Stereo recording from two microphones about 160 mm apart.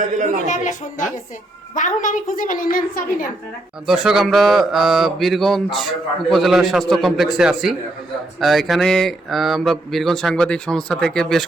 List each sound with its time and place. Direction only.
0.4 s a woman's voice: 50° left (ahead or behind)
3.8 s speech: 5° right (ahead or behind)